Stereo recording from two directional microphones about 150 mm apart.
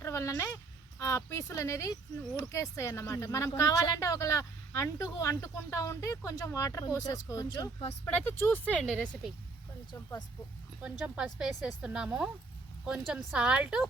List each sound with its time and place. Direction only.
0.0 s speech: 20° left (ahead or behind)
8.0 s speech: 10° left (ahead or behind)
8.8 s speech: centre (ahead or behind)
9.9 s speech: 20° left (ahead or behind)
10.8 s speech: 5° right (ahead or behind)